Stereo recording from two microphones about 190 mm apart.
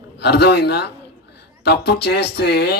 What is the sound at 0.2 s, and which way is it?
Speech, 60° left (ahead or behind).